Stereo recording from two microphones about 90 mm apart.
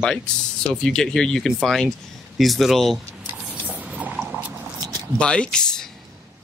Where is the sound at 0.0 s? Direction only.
10° left (ahead or behind).